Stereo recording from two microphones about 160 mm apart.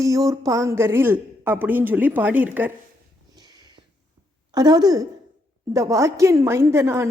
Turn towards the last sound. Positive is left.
turn(degrees=-15)  # may be behind; listen again after turning